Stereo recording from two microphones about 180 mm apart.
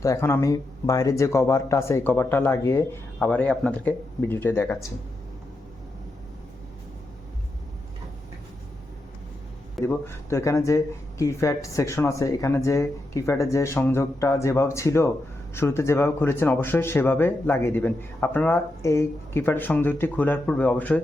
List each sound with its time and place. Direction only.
0.0 s speech: 15° left (ahead or behind)
9.8 s speech: 15° left (ahead or behind)